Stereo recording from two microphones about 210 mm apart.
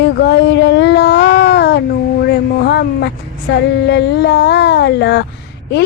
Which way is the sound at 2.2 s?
50° left (ahead or behind).